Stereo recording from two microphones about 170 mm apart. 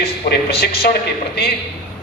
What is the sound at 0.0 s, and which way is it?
Speech, 65° left (ahead or behind).